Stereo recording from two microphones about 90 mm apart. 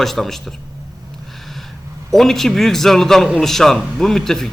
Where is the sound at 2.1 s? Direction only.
5° left (ahead or behind).